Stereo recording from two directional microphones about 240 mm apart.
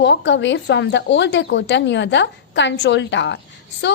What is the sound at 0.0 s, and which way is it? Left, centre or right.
A woman's voice, left.